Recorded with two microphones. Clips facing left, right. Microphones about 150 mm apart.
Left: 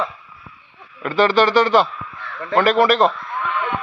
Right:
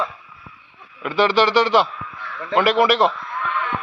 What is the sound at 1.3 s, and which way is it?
Speech, 50° left (ahead or behind).